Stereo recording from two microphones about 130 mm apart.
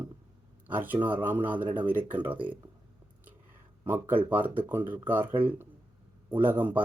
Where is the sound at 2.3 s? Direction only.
40° right (ahead or behind).